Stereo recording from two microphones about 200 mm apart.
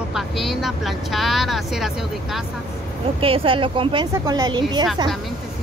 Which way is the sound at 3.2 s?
25° right (ahead or behind).